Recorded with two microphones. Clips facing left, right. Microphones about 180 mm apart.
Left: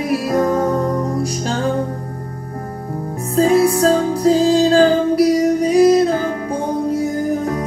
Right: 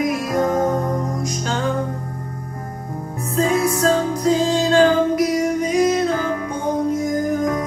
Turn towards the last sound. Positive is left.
turn(degrees=30)  # may be behind; listen again after turning